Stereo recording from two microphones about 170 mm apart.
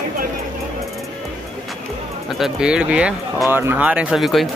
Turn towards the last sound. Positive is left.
turn(degrees=0)  # may be behind; listen again after turning